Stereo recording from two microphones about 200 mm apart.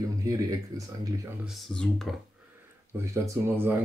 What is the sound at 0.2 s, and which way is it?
Speech, 15° right (ahead or behind).